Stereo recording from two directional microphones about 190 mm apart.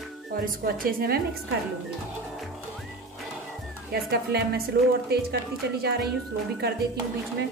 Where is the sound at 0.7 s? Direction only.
50° right (ahead or behind).